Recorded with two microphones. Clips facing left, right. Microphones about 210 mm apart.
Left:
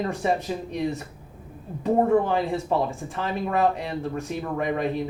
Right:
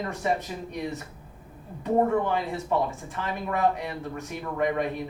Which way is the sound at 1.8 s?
30° left (ahead or behind).